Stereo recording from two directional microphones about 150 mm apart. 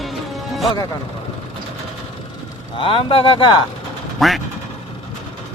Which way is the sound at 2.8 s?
35° left (ahead or behind).